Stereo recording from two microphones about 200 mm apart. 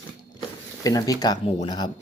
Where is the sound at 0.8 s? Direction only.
15° left (ahead or behind).